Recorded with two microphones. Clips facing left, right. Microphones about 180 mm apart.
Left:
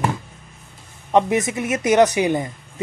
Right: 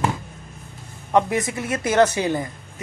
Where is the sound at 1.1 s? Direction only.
20° left (ahead or behind).